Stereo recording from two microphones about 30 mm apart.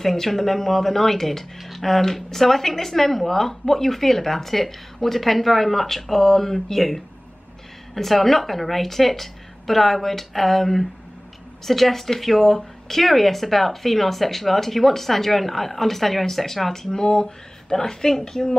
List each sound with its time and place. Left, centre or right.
0.0 s speech: centre
16.9 s speech: left